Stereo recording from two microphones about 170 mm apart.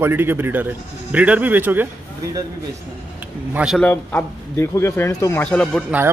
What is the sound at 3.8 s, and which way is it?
Speech, 10° left (ahead or behind).